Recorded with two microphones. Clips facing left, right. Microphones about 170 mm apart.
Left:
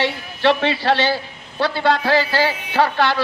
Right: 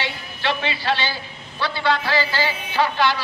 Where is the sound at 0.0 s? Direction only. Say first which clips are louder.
Left 8 dB; 65° left (ahead or behind).